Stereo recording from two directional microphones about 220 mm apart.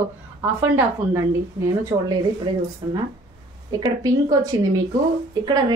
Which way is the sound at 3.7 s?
15° right (ahead or behind).